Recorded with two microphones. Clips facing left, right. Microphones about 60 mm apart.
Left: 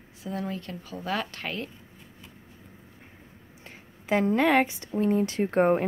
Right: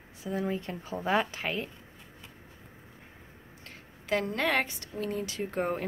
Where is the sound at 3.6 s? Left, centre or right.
Left.